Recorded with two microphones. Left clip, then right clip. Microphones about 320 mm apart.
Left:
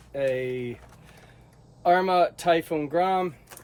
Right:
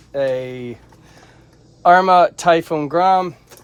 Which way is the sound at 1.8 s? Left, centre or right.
Centre.